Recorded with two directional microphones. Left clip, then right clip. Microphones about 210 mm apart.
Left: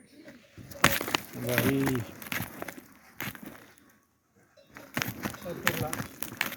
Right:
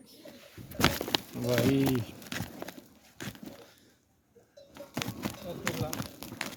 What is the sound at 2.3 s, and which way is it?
Walk, 20° left (ahead or behind).